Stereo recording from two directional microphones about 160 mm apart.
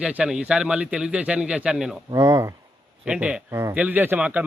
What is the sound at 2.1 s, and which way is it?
Speech, 20° right (ahead or behind).